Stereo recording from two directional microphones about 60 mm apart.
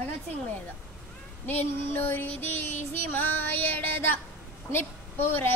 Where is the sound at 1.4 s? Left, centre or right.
Left.